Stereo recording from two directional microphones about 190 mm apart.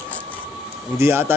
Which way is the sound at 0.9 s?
15° right (ahead or behind).